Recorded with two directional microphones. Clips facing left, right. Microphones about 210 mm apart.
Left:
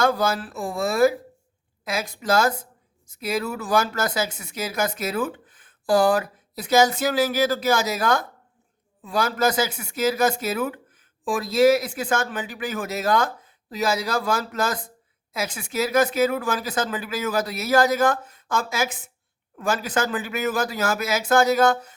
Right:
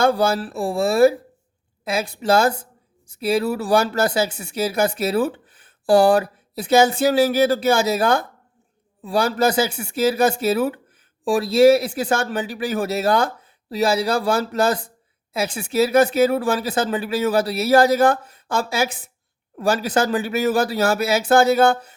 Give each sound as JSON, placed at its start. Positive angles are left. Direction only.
{"t": 0.0, "sound": "a woman's voice", "side_deg": -30}